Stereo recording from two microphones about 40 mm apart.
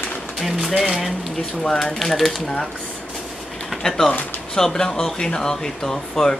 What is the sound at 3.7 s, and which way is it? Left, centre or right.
Pigeon, centre.